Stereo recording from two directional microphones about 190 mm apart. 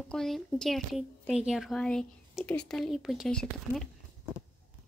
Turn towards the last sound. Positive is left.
turn(degrees=0)  # may be behind; listen again after turning